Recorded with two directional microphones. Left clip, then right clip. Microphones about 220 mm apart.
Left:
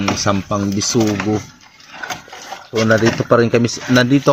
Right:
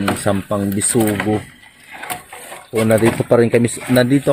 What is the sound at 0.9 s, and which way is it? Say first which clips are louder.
Speech: right 1 dB; 5° right (ahead or behind).